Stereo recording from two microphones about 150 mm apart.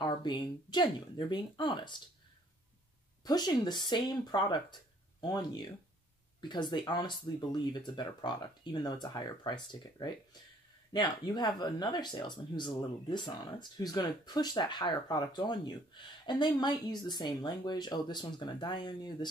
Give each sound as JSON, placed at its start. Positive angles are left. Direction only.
{"t": 0.0, "sound": "speech", "side_deg": 30}
{"t": 3.3, "sound": "speech", "side_deg": 25}